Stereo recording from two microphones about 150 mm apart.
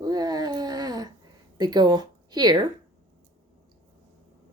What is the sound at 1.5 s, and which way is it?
Speech, 30° right (ahead or behind).